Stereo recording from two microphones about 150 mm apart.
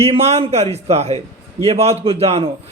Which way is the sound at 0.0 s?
45° right (ahead or behind).